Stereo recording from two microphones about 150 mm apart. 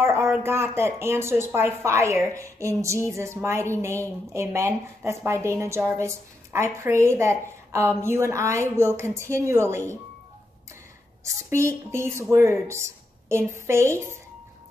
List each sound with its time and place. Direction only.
0.0 s a woman's voice: 15° right (ahead or behind)
11.5 s a woman's voice: 20° right (ahead or behind)